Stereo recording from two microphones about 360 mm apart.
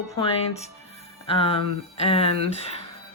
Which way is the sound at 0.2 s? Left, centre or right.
Centre.